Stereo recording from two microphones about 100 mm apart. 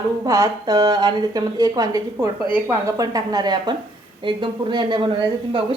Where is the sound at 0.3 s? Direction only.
35° right (ahead or behind).